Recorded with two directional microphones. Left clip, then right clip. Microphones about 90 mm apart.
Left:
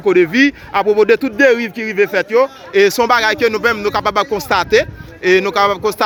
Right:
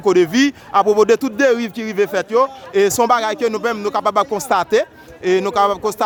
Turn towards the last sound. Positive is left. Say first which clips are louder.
# left 2 dB
turn(degrees=-5)  # may be behind; listen again after turning